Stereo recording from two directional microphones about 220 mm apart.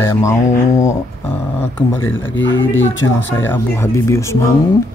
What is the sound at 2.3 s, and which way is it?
Speech, 60° left (ahead or behind).